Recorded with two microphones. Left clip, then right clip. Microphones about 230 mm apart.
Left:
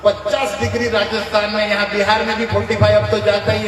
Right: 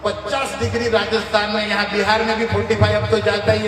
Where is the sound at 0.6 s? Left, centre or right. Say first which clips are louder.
Left 1 dB; right.